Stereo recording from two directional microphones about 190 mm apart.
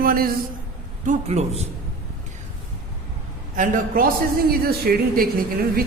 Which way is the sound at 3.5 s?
45° right (ahead or behind).